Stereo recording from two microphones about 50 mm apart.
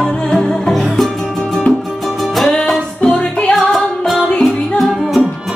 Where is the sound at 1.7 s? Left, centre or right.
Left.